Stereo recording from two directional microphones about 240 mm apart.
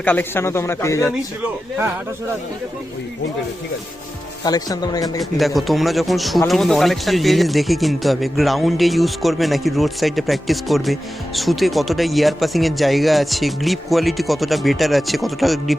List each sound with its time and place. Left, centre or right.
0.0 s speech: centre
4.4 s speech: centre
5.2 s speech: centre